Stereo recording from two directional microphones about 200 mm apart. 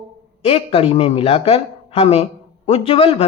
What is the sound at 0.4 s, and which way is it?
A woman's voice, 30° left (ahead or behind).